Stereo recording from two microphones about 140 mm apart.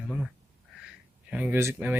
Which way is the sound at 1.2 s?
10° right (ahead or behind).